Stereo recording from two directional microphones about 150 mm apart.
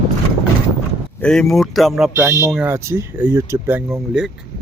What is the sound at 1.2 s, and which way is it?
Speech, 5° left (ahead or behind).